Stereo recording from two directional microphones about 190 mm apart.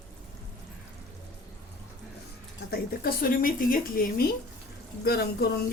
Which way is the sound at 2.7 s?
50° left (ahead or behind).